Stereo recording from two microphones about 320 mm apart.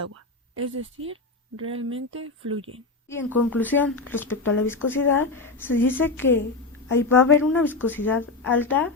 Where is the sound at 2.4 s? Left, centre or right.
Centre.